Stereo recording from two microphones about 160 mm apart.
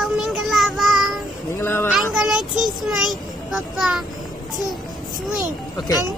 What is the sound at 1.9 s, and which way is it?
Child singing, centre (ahead or behind).